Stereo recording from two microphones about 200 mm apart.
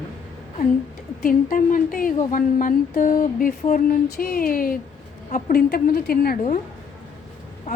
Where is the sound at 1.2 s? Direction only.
45° left (ahead or behind).